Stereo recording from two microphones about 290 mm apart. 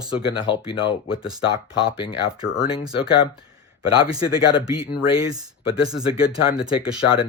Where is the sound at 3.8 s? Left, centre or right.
Centre.